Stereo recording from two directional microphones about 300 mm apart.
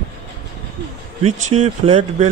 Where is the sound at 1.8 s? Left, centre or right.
Right.